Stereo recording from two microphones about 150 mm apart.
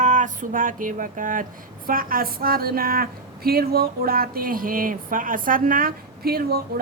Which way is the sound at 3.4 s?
90° right.